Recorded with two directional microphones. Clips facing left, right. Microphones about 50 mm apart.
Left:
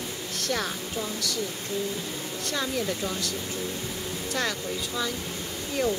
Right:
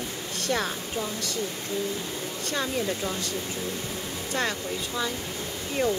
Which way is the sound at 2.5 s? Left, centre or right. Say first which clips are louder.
Right 1 dB; centre.